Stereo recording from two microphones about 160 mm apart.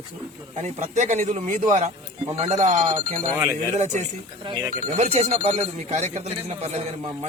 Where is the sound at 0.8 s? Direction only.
45° right (ahead or behind).